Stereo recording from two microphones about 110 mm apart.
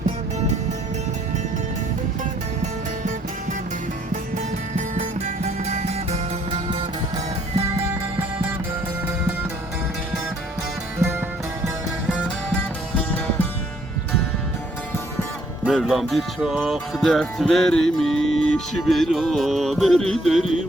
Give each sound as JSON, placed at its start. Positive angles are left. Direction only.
{"t": 4.9, "sound": "music", "side_deg": -90}
{"t": 15.6, "sound": "music", "side_deg": 0}